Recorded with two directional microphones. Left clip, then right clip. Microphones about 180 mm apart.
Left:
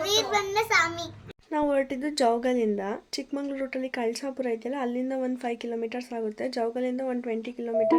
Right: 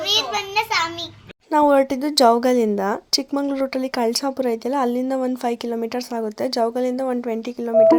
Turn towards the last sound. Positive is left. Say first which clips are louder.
# right 10 dB
turn(degrees=-25)  # may be behind; listen again after turning